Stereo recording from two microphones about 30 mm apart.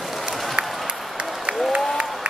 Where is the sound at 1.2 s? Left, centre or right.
Right.